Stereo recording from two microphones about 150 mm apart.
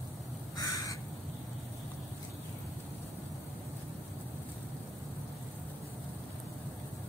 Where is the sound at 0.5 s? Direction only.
25° left (ahead or behind).